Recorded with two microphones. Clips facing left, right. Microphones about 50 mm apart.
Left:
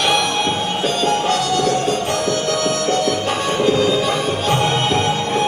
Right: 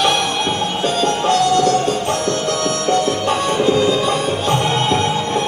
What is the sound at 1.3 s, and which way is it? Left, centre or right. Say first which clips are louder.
Music: right 3 dB; centre.